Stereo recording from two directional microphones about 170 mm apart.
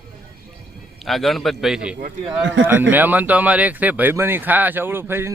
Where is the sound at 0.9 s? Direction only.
Centre (ahead or behind).